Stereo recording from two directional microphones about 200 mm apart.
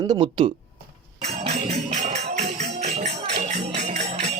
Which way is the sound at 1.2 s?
30° right (ahead or behind).